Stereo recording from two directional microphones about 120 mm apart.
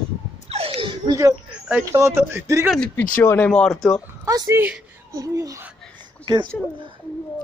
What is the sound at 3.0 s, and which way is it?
Speech, 15° left (ahead or behind).